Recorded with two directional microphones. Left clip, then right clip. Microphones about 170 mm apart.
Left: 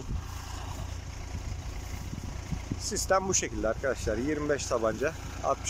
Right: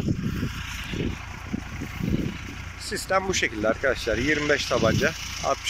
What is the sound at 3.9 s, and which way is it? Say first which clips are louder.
Speech: right 7 dB; 5° left (ahead or behind).